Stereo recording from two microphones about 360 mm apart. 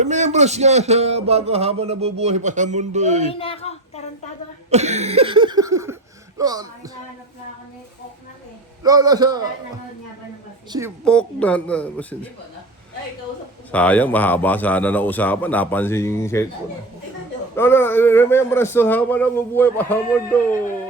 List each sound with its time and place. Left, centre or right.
0.0 s speech: centre
3.2 s a woman's voice: centre
4.7 s speech: centre
8.8 s speech: centre
10.7 s speech: centre
11.0 s a man's voice: centre
13.7 s a man's voice: centre
17.6 s a man's voice: centre